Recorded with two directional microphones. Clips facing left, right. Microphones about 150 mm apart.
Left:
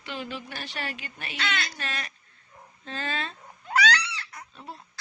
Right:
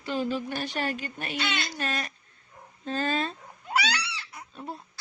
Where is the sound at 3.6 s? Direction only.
10° right (ahead or behind).